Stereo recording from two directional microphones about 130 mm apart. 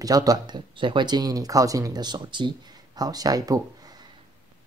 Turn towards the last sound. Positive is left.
turn(degrees=-30)  # may be behind; listen again after turning